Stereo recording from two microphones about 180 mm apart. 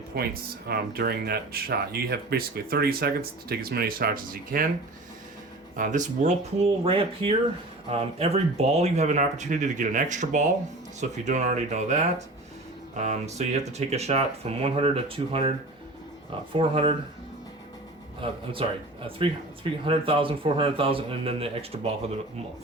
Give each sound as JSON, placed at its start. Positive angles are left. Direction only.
{"t": 0.1, "sound": "speech", "side_deg": -60}
{"t": 5.7, "sound": "speech", "side_deg": -45}
{"t": 18.2, "sound": "speech", "side_deg": -30}
{"t": 19.8, "sound": "speech", "side_deg": -30}